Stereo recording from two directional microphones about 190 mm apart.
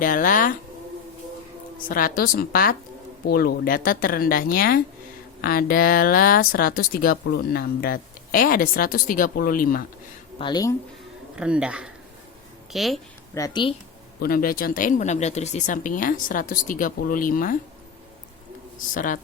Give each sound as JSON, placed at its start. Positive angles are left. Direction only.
{"t": 0.0, "sound": "speech", "side_deg": 45}
{"t": 1.9, "sound": "speech", "side_deg": 45}
{"t": 10.3, "sound": "speech", "side_deg": 25}
{"t": 11.3, "sound": "speech", "side_deg": -5}
{"t": 13.3, "sound": "a woman's voice", "side_deg": 20}
{"t": 14.2, "sound": "speech", "side_deg": 50}
{"t": 18.9, "sound": "speech", "side_deg": 45}